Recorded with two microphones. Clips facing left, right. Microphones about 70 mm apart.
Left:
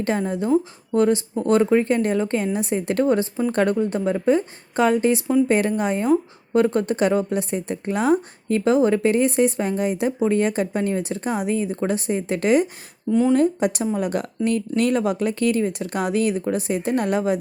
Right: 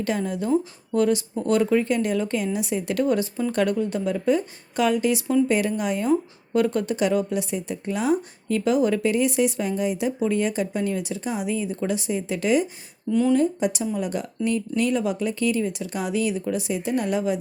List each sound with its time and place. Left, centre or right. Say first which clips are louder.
0.0 s speech: left 3 dB; left
13.1 s speech: left 2 dB; left
13.3 s speech: left 3 dB; left